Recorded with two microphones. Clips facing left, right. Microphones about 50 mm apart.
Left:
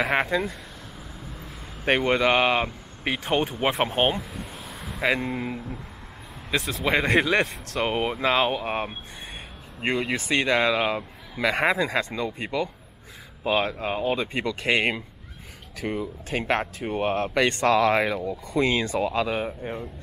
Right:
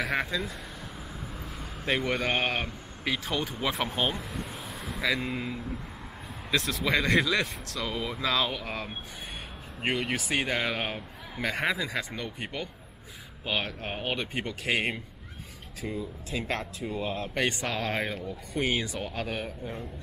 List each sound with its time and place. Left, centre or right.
0.1 s speech: left
1.9 s speech: left
4.2 s vehicle: centre
5.0 s speech: left
6.7 s speech: left
7.7 s speech: left
9.8 s speech: left
12.2 s speech: left
13.5 s speech: left
15.8 s speech: left
19.4 s speech: left